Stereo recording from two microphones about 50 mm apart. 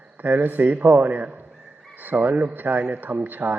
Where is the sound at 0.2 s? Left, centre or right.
Right.